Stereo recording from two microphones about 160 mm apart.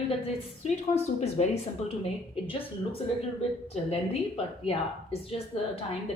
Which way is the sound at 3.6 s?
40° left (ahead or behind).